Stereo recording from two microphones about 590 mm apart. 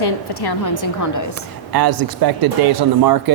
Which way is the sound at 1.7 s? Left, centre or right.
Right.